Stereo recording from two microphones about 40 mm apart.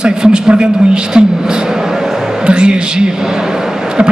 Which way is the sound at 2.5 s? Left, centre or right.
Right.